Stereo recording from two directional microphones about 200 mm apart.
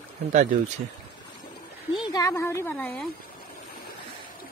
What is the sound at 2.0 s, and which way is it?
Speech, 15° left (ahead or behind).